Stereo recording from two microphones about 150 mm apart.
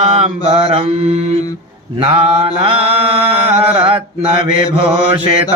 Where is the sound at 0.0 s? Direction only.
45° right (ahead or behind).